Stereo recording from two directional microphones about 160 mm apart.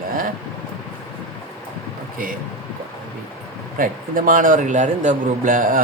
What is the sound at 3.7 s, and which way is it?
A man's voice, 60° right (ahead or behind).